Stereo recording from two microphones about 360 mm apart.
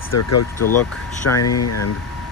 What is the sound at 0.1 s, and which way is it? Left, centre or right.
Speech, left.